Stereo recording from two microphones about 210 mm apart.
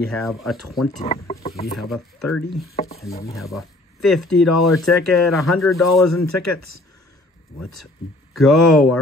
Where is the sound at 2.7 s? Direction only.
30° left (ahead or behind).